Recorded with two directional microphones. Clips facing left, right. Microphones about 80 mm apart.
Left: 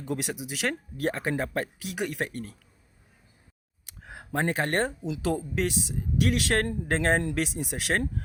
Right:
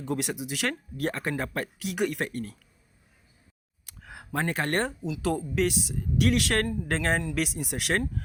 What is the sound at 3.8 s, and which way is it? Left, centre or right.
Speech, left.